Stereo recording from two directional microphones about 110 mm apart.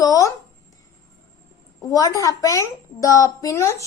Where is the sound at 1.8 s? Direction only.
35° left (ahead or behind).